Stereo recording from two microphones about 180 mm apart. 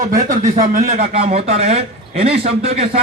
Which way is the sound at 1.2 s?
35° right (ahead or behind).